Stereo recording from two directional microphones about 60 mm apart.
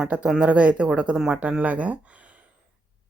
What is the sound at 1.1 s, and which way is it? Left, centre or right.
Speech, centre.